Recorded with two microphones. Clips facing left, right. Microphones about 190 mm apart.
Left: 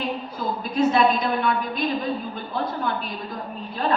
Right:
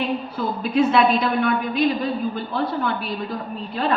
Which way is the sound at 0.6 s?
65° right (ahead or behind).